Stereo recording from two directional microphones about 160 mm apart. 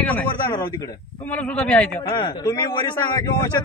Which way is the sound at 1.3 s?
10° left (ahead or behind).